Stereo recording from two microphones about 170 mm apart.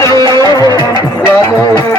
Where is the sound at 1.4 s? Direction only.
20° left (ahead or behind).